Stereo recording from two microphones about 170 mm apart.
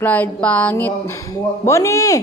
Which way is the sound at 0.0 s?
10° left (ahead or behind).